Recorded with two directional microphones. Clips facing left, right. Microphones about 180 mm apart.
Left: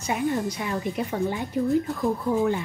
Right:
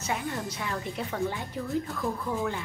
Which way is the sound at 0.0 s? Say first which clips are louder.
Left 7 dB; 15° left (ahead or behind).